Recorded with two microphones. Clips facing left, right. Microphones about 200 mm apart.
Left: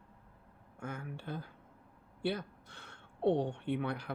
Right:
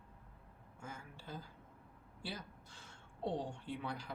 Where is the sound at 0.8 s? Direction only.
60° left (ahead or behind).